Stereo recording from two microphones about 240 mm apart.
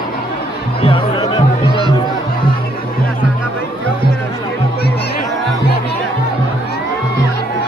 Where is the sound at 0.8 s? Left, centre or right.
Left.